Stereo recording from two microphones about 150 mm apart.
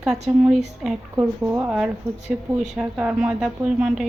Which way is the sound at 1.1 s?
15° right (ahead or behind).